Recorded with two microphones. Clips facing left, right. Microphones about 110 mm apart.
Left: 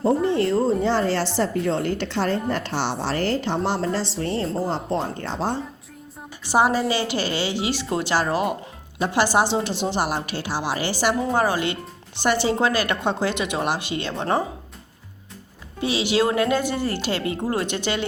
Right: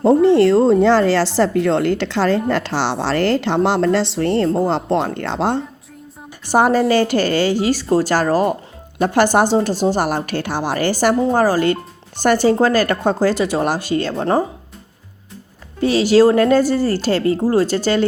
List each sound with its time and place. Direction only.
0.3 s speech: 90° right
6.4 s a woman's voice: 50° right (ahead or behind)
9.0 s a woman's voice: 50° right (ahead or behind)
15.8 s speech: 45° right (ahead or behind)